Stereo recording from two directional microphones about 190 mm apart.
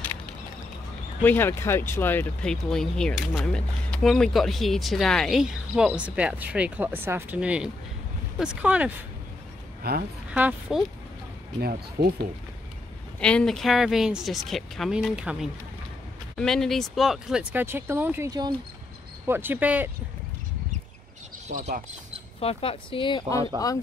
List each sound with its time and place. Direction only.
1.2 s speech: 10° left (ahead or behind); by 8.9 s 5° right (ahead or behind)
9.8 s a woman's voice: 55° right (ahead or behind)
10.3 s speech: 10° right (ahead or behind)
11.6 s speech: 55° right (ahead or behind)
13.2 s speech: 5° left (ahead or behind)
21.5 s speech: 45° right (ahead or behind)
22.4 s speech: 30° left (ahead or behind)